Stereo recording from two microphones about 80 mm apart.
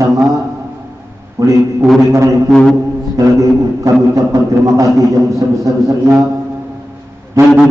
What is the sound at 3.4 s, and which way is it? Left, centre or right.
A man's voice, right.